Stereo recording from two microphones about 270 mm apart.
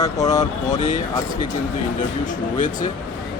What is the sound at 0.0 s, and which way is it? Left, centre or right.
Speech, centre.